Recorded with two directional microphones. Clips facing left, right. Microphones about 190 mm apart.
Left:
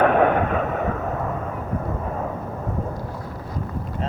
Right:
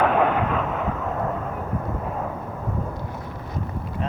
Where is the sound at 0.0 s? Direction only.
55° left (ahead or behind).